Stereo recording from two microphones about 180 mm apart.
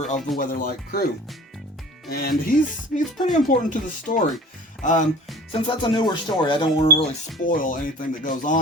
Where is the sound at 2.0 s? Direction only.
60° left (ahead or behind).